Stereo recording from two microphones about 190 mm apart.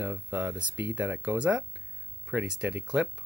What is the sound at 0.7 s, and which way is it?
Speech, 70° right (ahead or behind).